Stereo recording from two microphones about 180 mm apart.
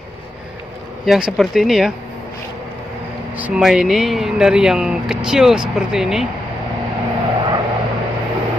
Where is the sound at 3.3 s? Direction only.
5° right (ahead or behind).